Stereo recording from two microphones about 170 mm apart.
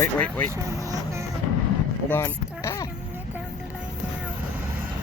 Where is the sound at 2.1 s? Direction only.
15° left (ahead or behind).